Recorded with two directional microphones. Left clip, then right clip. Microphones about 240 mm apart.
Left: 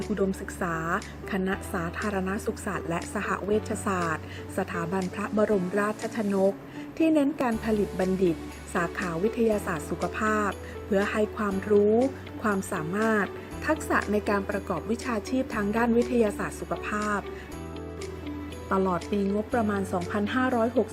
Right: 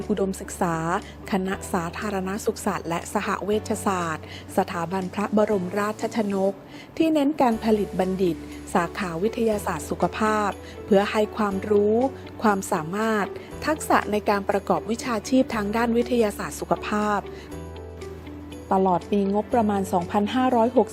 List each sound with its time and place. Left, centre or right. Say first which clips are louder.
0.1 s a woman's voice: right 4 dB; right
18.7 s speech: right 6 dB; centre
19.1 s a woman's voice: right 5 dB; right